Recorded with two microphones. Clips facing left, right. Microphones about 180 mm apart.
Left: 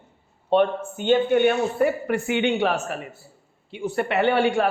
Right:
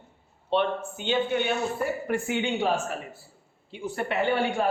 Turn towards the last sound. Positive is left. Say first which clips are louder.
# left 5 dB
turn(degrees=75)  # may be behind; listen again after turning